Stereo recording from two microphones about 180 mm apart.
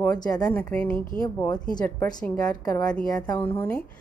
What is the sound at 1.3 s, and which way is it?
Speech, 20° left (ahead or behind).